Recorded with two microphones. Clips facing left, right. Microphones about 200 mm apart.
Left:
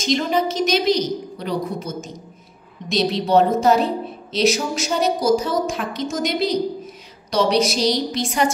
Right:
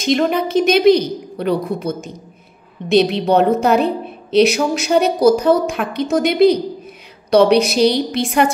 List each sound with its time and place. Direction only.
0.0 s a woman's voice: 60° right (ahead or behind)